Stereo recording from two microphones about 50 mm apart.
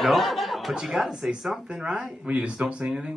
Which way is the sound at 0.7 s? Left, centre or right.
Centre.